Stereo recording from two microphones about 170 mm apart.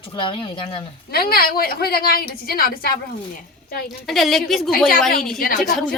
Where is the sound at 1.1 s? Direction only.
65° left (ahead or behind).